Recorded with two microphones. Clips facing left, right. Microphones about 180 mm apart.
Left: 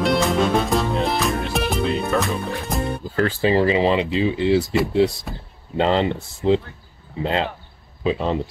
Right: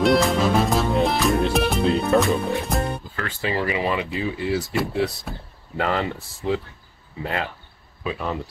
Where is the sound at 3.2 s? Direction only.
35° left (ahead or behind).